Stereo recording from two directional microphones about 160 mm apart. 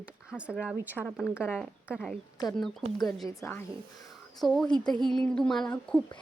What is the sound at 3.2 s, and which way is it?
Speech, 20° left (ahead or behind).